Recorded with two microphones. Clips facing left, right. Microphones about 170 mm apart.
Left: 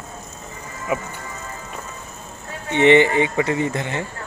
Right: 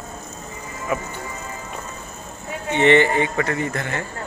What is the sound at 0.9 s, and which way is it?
Speech, 15° left (ahead or behind).